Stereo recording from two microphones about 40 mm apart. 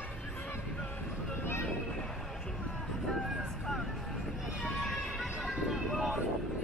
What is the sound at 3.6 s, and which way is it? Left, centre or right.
Vehicle, centre.